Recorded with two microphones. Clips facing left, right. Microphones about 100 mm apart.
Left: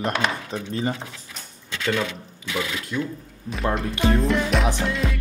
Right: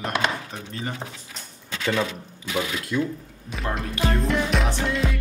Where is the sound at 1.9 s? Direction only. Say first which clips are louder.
Even; 40° right (ahead or behind).